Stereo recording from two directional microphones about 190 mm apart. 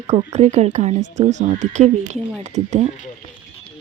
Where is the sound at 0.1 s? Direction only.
35° right (ahead or behind).